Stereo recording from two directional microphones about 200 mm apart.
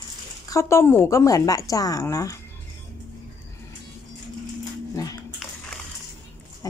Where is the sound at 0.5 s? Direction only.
15° left (ahead or behind).